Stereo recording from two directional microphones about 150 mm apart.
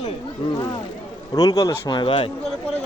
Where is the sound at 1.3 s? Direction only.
25° left (ahead or behind).